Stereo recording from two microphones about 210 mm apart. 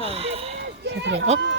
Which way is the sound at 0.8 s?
55° right (ahead or behind).